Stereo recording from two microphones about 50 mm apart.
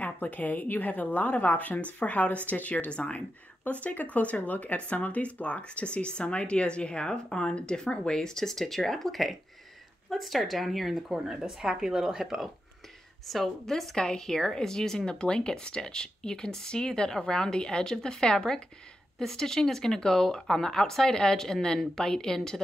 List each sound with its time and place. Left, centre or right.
0.0 s a woman's voice: left; by 11.1 s centre
11.1 s speech: centre
13.3 s speech: centre